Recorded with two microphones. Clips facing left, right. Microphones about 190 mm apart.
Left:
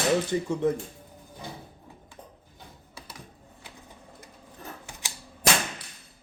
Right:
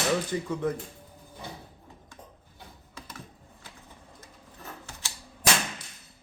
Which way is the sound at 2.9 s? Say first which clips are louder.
Right 2 dB; 10° left (ahead or behind).